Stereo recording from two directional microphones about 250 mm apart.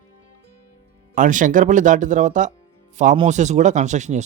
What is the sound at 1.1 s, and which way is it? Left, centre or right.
Speech, right.